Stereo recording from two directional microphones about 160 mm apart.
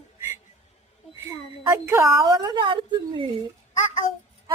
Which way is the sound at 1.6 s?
15° right (ahead or behind).